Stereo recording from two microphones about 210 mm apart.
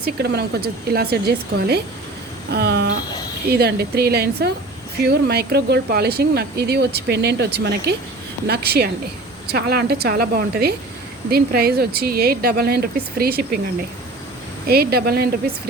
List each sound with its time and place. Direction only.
0.0 s speech: 50° right (ahead or behind)
14.7 s speech: 45° right (ahead or behind)